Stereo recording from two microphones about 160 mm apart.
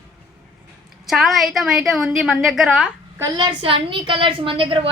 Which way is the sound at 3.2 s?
30° right (ahead or behind).